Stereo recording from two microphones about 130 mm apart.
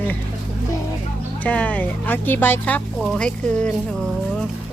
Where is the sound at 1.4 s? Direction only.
10° left (ahead or behind).